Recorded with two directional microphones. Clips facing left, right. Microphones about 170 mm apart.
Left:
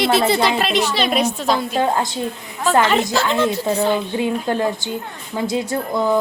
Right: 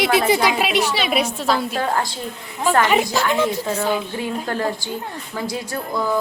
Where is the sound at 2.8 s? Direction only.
10° right (ahead or behind).